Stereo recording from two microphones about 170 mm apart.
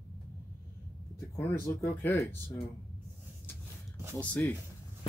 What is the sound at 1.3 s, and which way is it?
Speech, 15° left (ahead or behind).